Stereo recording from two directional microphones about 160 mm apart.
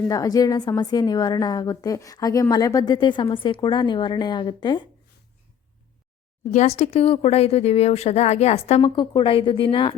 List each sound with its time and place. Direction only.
0.1 s a woman's voice: 20° left (ahead or behind)
6.5 s speech: 45° left (ahead or behind)